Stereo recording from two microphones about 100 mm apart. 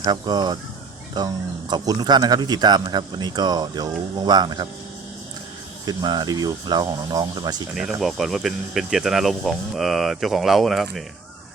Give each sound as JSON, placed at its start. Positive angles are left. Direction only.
{"t": 0.0, "sound": "speech", "side_deg": -45}
{"t": 5.8, "sound": "speech", "side_deg": -45}
{"t": 7.8, "sound": "speech", "side_deg": -5}